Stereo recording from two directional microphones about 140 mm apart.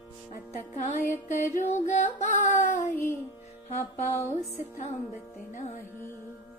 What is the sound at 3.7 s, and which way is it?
Music, 50° left (ahead or behind).